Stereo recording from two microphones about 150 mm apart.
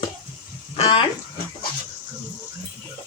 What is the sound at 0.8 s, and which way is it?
Speech, 40° left (ahead or behind).